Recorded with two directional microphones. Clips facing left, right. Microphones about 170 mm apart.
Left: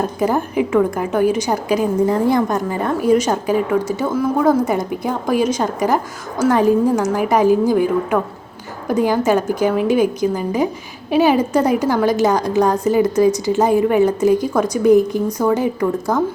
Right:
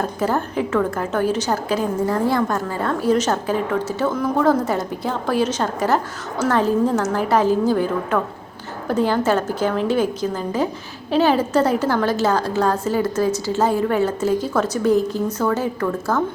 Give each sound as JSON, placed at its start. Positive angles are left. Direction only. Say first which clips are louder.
{"t": 0.2, "sound": "a woman's voice", "louder": "left 4 dB", "side_deg": 15}